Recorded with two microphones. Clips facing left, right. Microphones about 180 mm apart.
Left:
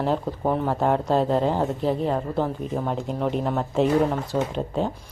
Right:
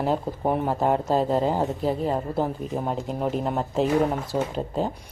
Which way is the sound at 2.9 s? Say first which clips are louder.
Left 1 dB; centre (ahead or behind).